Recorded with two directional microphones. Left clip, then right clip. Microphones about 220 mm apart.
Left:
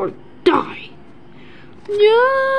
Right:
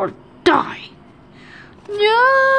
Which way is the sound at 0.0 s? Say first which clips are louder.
Even; 20° right (ahead or behind).